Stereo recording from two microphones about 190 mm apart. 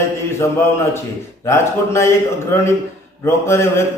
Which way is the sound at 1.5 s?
15° left (ahead or behind).